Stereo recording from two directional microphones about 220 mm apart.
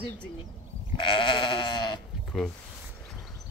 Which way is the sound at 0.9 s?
20° left (ahead or behind).